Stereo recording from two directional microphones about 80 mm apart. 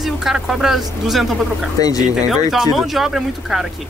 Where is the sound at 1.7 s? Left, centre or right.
Left.